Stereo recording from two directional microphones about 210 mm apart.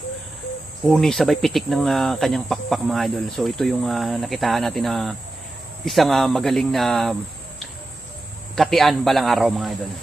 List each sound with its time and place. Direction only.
0.9 s speech: centre (ahead or behind)
8.5 s speech: centre (ahead or behind)